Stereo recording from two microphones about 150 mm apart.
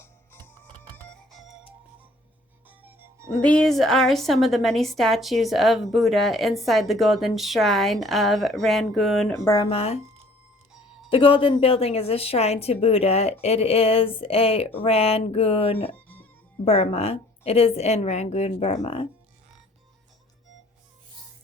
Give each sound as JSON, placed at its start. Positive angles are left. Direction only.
{"t": 0.0, "sound": "music", "side_deg": 15}
{"t": 0.9, "sound": "music", "side_deg": 5}
{"t": 2.6, "sound": "music", "side_deg": -15}
{"t": 3.4, "sound": "a woman's voice", "side_deg": 5}
{"t": 9.4, "sound": "speech", "side_deg": 20}
{"t": 9.6, "sound": "a woman's voice", "side_deg": 40}
{"t": 11.1, "sound": "a woman's voice", "side_deg": 35}